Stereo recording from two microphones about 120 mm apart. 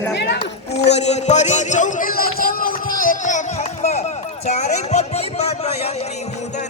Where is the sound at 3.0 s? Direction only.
90° left; by 4.1 s 70° left (ahead or behind).